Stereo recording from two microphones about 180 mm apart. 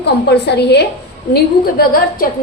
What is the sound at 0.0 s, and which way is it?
Speech, 65° left (ahead or behind).